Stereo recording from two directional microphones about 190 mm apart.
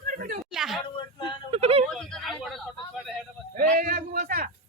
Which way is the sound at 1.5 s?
30° right (ahead or behind).